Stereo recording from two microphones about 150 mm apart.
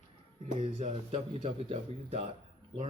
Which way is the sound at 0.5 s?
40° right (ahead or behind).